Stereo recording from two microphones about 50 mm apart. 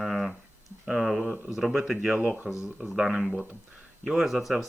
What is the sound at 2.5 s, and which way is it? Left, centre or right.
Speech, right.